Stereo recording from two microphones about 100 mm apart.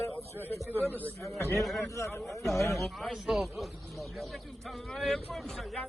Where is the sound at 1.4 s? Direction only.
30° left (ahead or behind).